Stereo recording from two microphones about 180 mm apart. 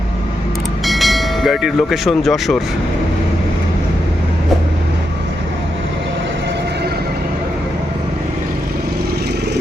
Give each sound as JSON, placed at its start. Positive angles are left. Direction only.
{"t": 0.9, "sound": "speech", "side_deg": 0}